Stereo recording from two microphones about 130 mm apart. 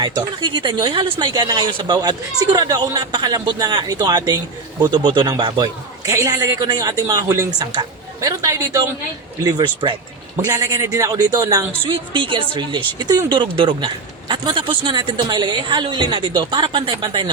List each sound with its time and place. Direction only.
0.0 s speech: 35° right (ahead or behind)
6.1 s speech: 25° right (ahead or behind)
11.9 s speech: 40° right (ahead or behind)